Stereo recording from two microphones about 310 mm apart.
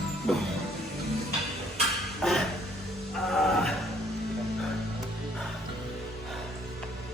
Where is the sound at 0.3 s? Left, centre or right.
Centre.